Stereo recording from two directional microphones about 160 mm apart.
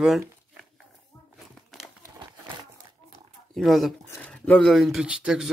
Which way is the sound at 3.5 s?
Centre (ahead or behind).